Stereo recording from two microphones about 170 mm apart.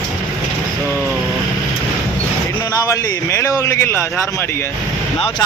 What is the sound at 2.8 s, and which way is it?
A man's voice, 15° left (ahead or behind).